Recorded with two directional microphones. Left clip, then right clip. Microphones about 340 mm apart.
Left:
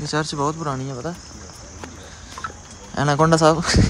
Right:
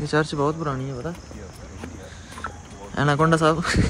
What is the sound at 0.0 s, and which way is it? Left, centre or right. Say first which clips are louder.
Speech: even; centre.